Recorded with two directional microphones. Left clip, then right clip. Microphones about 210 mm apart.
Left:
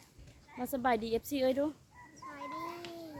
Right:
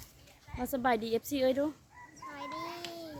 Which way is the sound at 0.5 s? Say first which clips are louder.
Right 1 dB; centre (ahead or behind).